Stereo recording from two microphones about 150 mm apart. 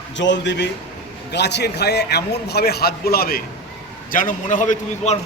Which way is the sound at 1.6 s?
90° left.